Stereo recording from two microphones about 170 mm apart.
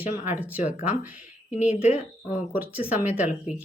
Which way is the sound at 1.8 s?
40° left (ahead or behind).